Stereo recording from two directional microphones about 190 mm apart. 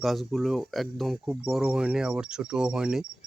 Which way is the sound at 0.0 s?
Centre (ahead or behind).